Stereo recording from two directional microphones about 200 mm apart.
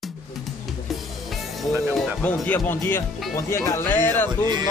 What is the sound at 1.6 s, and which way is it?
Speech, 5° left (ahead or behind).